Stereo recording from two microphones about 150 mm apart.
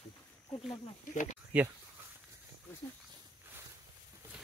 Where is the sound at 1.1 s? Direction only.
60° left (ahead or behind).